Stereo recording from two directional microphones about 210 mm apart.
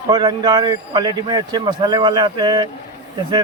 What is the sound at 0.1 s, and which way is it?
Speech, 20° right (ahead or behind).